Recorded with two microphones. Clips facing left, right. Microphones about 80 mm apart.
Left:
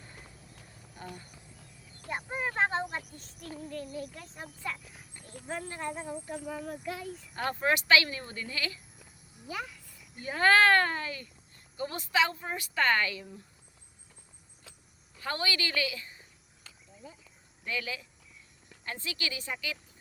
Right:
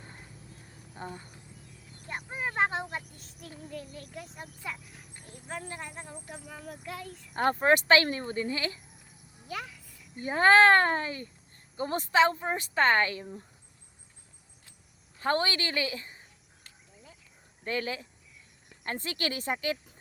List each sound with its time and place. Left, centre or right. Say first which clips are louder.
0.9 s speech: right 4 dB; right
2.3 s a child's voice: even; centre
4.1 s a child's voice: right 2 dB; centre
5.9 s a child's voice: left 6 dB; centre
7.3 s speech: right 6 dB; right
9.5 s a sound: even; centre
10.2 s speech: right 3 dB; right
15.2 s speech: right 5 dB; right
17.0 s cricket: left 7 dB; centre
17.6 s a woman's voice: right 4 dB; right